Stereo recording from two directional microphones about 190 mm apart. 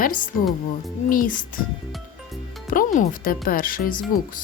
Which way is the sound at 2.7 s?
40° left (ahead or behind).